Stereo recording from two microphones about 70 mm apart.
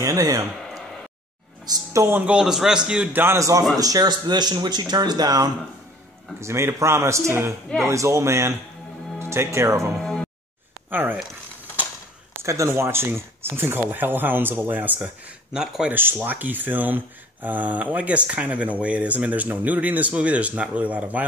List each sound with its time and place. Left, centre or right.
0.0 s a man's voice: right
0.6 s a sound: centre
2.0 s speech: right
2.3 s a man's voice: centre
3.1 s speech: right
3.3 s speech: right
6.4 s a man's voice: right
10.9 s speech: right
12.4 s speech: right
12.7 s speech: right
15.5 s a man's voice: centre
15.9 s speech: right